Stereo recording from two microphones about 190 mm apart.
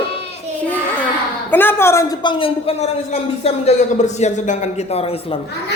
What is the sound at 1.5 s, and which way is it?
A woman's voice, 10° left (ahead or behind).